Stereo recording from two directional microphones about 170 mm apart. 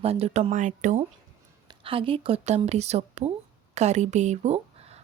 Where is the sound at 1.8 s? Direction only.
30° right (ahead or behind).